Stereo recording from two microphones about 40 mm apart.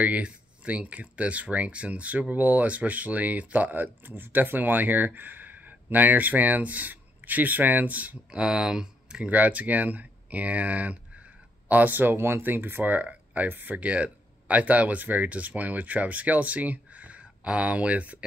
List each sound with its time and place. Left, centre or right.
0.0 s speech: right
8.3 s speech: right
9.2 s speech: right
11.7 s speech: right
12.2 s speech: right
12.4 s speech: right
12.9 s speech: right
13.5 s speech: right
13.7 s speech: right